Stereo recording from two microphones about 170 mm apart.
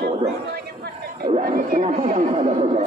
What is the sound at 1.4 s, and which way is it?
Speech, 55° right (ahead or behind).